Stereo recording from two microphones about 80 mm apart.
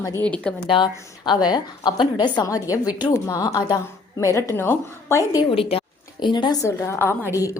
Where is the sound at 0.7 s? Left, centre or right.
Left.